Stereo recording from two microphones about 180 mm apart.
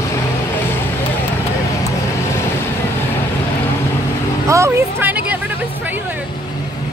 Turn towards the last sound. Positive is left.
turn(degrees=-10)  # may be behind; listen again after turning